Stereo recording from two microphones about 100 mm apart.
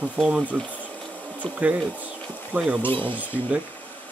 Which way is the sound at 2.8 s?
20° left (ahead or behind).